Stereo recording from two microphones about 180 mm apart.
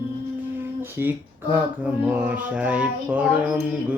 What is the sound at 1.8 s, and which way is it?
Mantra, 10° right (ahead or behind).